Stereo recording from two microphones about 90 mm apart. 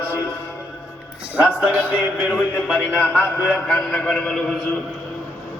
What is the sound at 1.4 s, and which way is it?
A man's voice, 15° right (ahead or behind).